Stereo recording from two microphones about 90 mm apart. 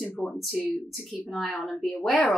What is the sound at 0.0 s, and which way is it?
Speech, 5° left (ahead or behind).